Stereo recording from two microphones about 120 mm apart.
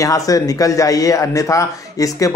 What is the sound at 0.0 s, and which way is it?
Speech, 30° left (ahead or behind).